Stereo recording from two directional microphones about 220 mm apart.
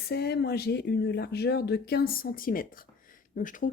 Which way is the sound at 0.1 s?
45° left (ahead or behind).